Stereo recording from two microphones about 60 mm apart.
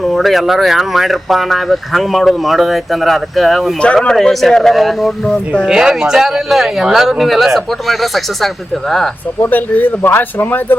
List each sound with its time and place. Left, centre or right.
0.0 s speech: centre
5.6 s speech: centre
9.4 s a man's voice: left